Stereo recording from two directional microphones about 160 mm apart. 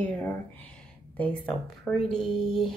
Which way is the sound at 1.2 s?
10° left (ahead or behind).